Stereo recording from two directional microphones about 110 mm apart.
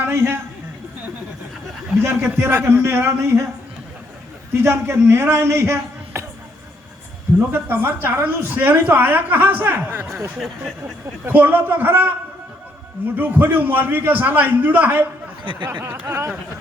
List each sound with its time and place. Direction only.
0.0 s a man's voice: 20° right (ahead or behind)
2.0 s a man's voice: 20° right (ahead or behind)
4.5 s a man's voice: 20° right (ahead or behind)
7.5 s a woman's voice: 20° right (ahead or behind)
10.3 s speech: 5° right (ahead or behind)
11.3 s a woman's voice: 20° right (ahead or behind)
13.1 s a woman's voice: 15° right (ahead or behind)